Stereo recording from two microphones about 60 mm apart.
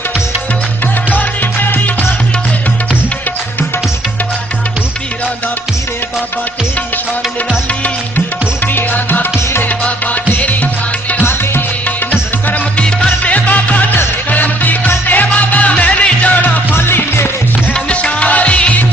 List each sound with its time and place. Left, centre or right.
1.1 s music: left
8.7 s music: left
10.4 s music: left
12.7 s music: centre
16.7 s music: left
17.7 s music: centre